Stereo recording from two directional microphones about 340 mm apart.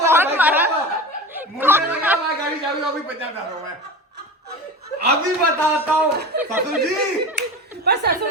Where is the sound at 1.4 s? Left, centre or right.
Centre.